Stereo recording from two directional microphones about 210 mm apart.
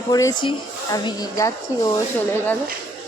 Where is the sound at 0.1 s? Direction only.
15° left (ahead or behind).